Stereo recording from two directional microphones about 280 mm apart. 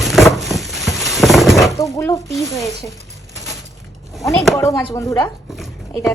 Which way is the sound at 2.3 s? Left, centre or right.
Centre.